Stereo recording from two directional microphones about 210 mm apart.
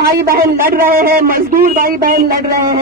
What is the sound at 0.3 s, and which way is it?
Speech, 45° right (ahead or behind).